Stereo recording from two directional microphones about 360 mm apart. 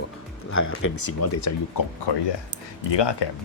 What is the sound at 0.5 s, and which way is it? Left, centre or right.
Speech, left.